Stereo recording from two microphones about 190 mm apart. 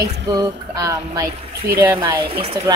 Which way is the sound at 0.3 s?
15° right (ahead or behind).